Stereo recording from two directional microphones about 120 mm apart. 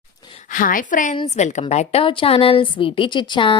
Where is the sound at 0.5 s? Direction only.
90° left.